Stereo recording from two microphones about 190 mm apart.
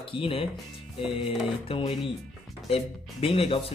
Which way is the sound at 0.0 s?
30° left (ahead or behind).